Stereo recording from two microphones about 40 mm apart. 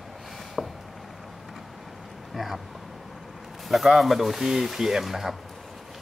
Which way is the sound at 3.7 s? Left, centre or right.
Centre.